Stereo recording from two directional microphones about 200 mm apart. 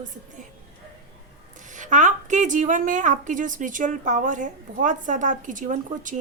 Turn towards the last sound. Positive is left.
turn(degrees=-40)  # may be behind; listen again after turning